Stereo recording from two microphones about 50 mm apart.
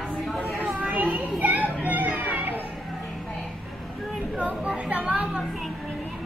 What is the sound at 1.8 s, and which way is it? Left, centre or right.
Music, right.